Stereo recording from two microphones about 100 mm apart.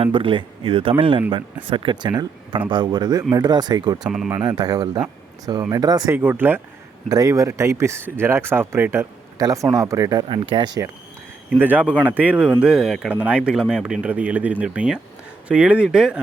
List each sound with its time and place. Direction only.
0.0 s speech: 60° right (ahead or behind); by 3.9 s 45° right (ahead or behind)
4.0 s speech: 5° right (ahead or behind)
4.3 s speech: 40° right (ahead or behind)
6.1 s speech: 20° right (ahead or behind)
7.1 s speech: 35° right (ahead or behind)
9.4 s speech: 35° right (ahead or behind)
10.2 s speech: 55° right (ahead or behind)
11.5 s speech: 20° right (ahead or behind)